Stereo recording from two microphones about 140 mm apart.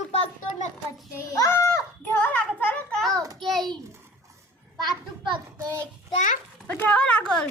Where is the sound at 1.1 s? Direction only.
25° left (ahead or behind).